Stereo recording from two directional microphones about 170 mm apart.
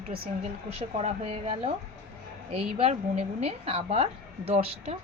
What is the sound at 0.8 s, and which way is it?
Speech, 35° right (ahead or behind).